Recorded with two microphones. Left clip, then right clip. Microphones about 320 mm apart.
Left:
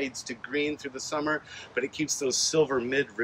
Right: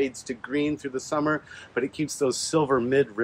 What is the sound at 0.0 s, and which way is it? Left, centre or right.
Speech, centre.